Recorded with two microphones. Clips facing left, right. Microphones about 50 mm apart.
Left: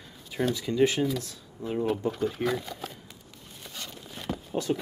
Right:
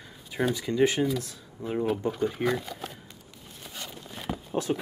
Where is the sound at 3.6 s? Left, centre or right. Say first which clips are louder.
Right 1 dB; centre.